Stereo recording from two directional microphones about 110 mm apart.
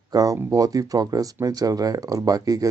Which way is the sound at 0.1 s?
35° right (ahead or behind).